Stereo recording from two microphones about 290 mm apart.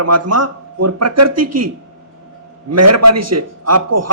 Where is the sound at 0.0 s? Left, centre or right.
Right.